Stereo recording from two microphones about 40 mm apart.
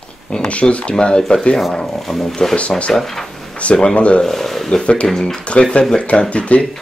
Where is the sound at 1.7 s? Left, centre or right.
Centre.